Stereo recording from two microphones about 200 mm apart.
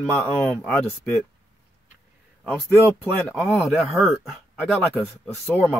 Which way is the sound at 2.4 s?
5° left (ahead or behind).